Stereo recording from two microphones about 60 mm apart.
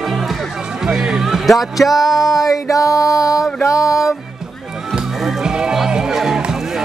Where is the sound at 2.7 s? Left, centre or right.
Left.